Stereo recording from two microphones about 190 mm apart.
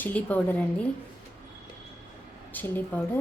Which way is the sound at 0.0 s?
10° left (ahead or behind).